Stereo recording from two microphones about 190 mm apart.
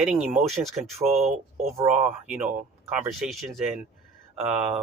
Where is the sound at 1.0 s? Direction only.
40° right (ahead or behind).